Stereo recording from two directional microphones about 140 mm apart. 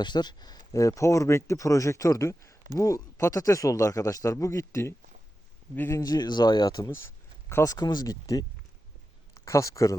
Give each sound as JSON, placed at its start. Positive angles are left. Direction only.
{"t": 0.0, "sound": "speech", "side_deg": 30}